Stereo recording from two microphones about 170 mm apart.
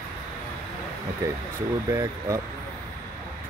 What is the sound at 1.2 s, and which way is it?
Speech, 20° right (ahead or behind).